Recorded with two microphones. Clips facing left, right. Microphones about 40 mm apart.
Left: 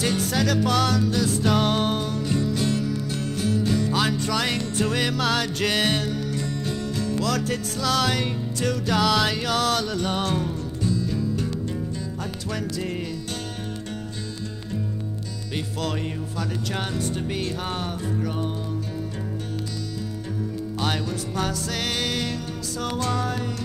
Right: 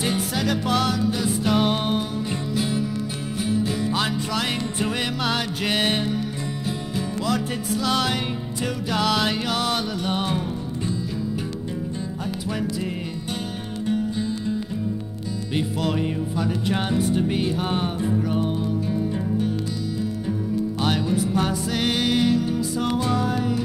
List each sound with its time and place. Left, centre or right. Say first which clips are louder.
0.0 s music: left 1 dB; centre
7.2 s music: right 1 dB; centre
12.4 s music: right 2 dB; centre
15.5 s music: right 4 dB; centre
20.8 s music: right 3 dB; centre